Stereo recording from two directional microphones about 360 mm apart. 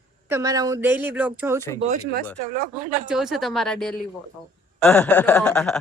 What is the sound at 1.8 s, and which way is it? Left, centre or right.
Speech, right.